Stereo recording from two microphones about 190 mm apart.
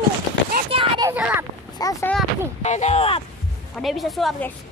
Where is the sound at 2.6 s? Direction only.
35° left (ahead or behind).